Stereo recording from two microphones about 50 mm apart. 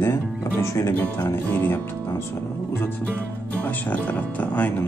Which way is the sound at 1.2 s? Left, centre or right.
Left.